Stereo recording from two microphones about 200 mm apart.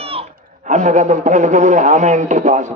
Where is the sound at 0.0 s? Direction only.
30° right (ahead or behind).